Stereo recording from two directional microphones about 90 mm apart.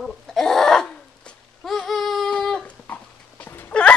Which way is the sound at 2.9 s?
20° left (ahead or behind).